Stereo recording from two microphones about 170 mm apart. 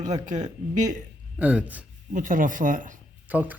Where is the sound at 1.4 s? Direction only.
10° right (ahead or behind).